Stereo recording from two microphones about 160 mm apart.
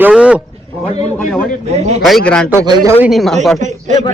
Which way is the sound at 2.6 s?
25° right (ahead or behind).